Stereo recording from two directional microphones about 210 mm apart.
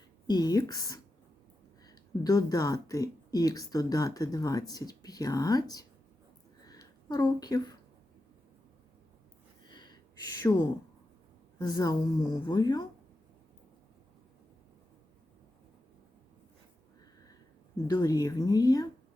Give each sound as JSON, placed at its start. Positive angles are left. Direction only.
{"t": 0.3, "sound": "speech", "side_deg": 20}
{"t": 6.7, "sound": "a sound", "side_deg": 20}
{"t": 9.6, "sound": "a sound", "side_deg": 20}
{"t": 10.5, "sound": "speech", "side_deg": 15}
{"t": 11.6, "sound": "speech", "side_deg": 15}
{"t": 17.8, "sound": "speech", "side_deg": 20}